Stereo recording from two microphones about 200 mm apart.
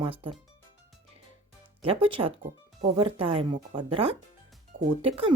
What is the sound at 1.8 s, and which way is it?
Speech, 25° right (ahead or behind).